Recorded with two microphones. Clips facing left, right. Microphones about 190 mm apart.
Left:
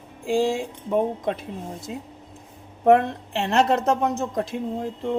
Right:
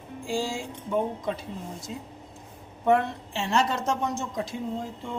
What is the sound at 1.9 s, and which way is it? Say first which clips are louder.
Speech: left 3 dB; 70° left (ahead or behind).